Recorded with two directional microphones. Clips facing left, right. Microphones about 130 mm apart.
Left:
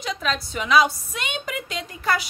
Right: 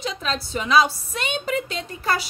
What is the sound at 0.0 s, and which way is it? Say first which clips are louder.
A woman's voice: left 1 dB; 30° right (ahead or behind).